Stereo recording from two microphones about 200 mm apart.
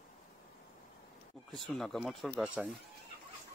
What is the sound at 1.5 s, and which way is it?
Speech, centre (ahead or behind).